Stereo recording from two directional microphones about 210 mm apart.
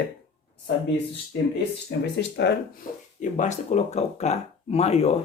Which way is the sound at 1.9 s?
55° left (ahead or behind).